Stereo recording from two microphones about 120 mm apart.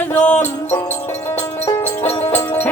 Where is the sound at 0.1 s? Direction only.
10° left (ahead or behind).